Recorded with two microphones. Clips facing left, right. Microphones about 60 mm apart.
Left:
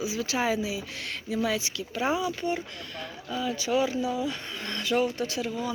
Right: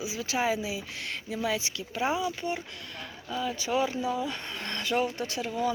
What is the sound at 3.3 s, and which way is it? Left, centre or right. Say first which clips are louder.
Speech: left 2 dB; right.